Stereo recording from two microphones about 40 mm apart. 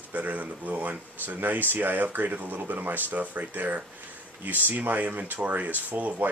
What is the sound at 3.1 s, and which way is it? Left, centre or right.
Speech, right.